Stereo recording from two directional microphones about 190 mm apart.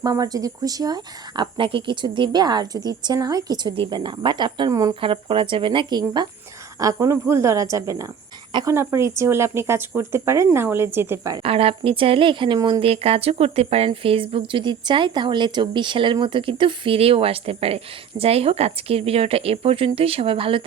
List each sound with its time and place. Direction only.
0.0 s a woman's voice: 20° right (ahead or behind)
11.4 s a woman's voice: 30° right (ahead or behind)